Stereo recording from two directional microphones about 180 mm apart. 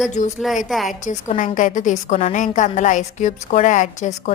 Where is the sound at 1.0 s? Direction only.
45° left (ahead or behind).